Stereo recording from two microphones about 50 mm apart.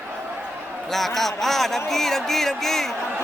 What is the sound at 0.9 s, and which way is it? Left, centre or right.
A man's voice, centre.